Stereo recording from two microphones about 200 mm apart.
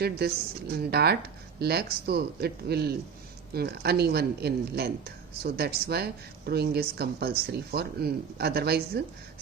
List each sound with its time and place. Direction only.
0.0 s a woman's voice: 55° right (ahead or behind)